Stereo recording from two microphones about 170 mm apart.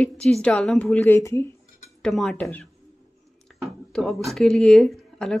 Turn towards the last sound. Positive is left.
turn(degrees=0)  # may be behind; listen again after turning